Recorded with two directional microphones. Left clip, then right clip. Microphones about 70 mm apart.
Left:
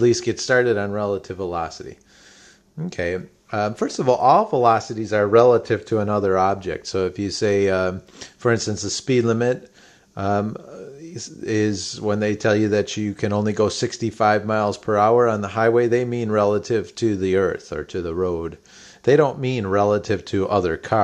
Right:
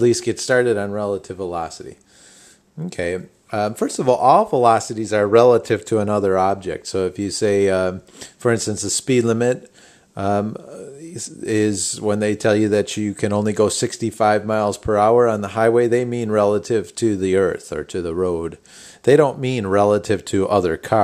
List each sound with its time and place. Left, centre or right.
0.0 s speech: right
2.9 s speech: right